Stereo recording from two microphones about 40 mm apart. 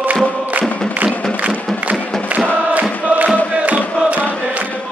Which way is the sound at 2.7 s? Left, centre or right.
Right.